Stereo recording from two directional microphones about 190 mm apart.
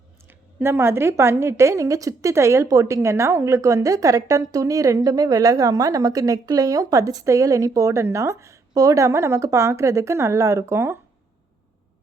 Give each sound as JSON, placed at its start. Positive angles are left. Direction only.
{"t": 0.3, "sound": "a woman's voice", "side_deg": -15}